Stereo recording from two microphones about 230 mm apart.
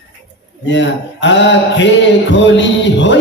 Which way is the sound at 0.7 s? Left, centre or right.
Left.